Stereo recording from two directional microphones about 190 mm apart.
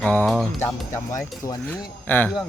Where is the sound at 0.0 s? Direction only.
10° left (ahead or behind).